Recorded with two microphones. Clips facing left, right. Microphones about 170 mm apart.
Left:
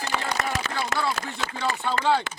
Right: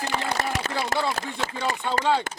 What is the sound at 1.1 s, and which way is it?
Speech, 40° right (ahead or behind).